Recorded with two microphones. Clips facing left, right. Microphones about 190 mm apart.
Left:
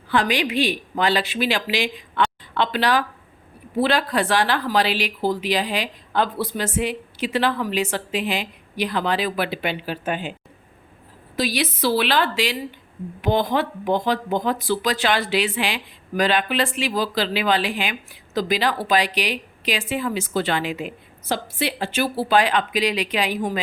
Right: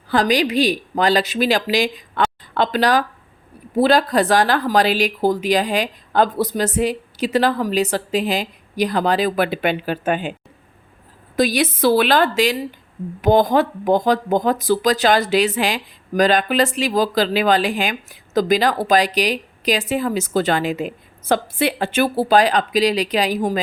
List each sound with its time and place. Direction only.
0.1 s speech: 40° right (ahead or behind)
11.3 s speech: 50° right (ahead or behind)